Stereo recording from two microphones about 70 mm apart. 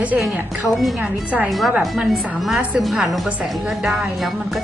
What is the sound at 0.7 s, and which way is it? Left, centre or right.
A woman's voice, centre.